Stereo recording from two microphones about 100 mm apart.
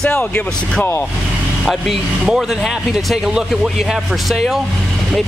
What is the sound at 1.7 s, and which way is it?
Speech, 5° right (ahead or behind).